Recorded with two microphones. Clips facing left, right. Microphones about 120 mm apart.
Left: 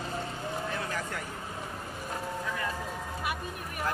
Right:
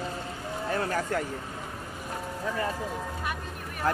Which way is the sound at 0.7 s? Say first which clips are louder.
Right 6 dB; 50° right (ahead or behind).